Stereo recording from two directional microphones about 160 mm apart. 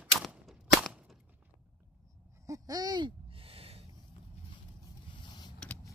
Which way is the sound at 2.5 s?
20° right (ahead or behind).